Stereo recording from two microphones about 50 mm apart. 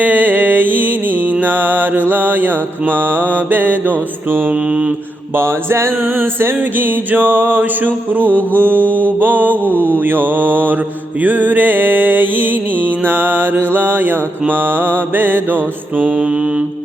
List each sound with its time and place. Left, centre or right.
0.0 s music: right
4.3 s mantra: right
4.5 s mantra: centre
5.3 s mantra: right
6.6 s music: right
16.1 s mantra: centre